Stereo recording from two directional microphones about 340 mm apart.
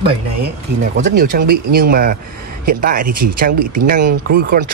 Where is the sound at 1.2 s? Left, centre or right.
Right.